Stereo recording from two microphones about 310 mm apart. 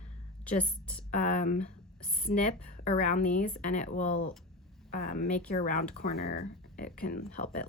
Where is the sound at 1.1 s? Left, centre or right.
Left.